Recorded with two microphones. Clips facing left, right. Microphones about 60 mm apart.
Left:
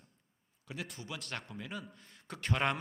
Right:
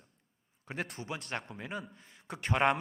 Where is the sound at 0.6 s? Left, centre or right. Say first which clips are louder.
Right 5 dB; right.